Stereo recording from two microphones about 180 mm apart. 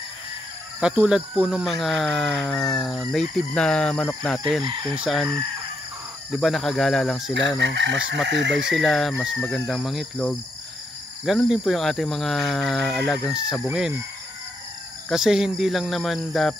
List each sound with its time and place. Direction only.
0.7 s speech: 5° right (ahead or behind)
6.3 s speech: centre (ahead or behind)
7.5 s speech: 80° right
8.6 s speech: centre (ahead or behind)
15.0 s speech: centre (ahead or behind)